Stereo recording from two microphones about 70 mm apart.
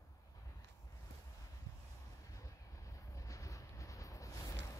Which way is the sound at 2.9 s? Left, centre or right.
Left.